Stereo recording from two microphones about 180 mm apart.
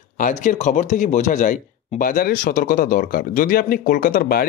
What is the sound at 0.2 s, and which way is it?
Speech, 45° left (ahead or behind).